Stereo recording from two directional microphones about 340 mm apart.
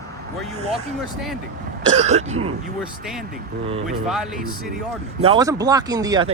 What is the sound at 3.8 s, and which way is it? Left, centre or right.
Speech, centre.